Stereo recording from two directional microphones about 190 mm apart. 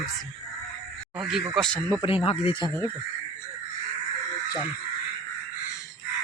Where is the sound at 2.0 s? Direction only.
30° left (ahead or behind).